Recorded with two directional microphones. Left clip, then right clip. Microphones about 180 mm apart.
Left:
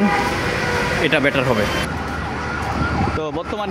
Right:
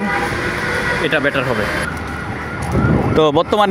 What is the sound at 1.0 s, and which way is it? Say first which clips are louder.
Speech: left 1 dB; 15° left (ahead or behind).